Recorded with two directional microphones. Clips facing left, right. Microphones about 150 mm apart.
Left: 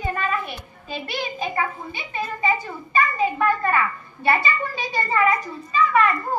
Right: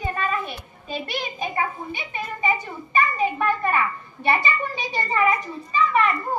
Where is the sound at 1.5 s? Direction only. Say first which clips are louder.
Even; 20° right (ahead or behind).